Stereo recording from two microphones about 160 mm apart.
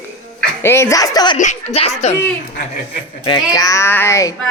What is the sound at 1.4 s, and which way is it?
Speech, 45° left (ahead or behind).